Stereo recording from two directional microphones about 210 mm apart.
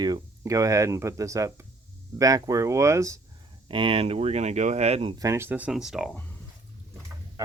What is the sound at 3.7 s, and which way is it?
Speech, 25° right (ahead or behind).